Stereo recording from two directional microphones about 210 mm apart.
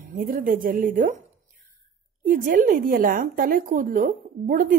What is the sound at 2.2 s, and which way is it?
A woman's voice, 40° right (ahead or behind).